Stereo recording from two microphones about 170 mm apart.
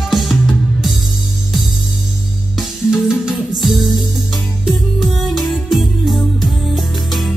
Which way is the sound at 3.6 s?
Centre (ahead or behind).